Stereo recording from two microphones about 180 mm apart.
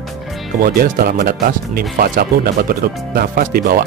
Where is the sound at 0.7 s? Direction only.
55° right (ahead or behind).